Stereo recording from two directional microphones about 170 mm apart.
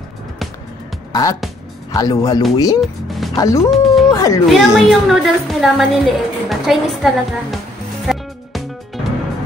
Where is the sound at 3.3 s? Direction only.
20° left (ahead or behind).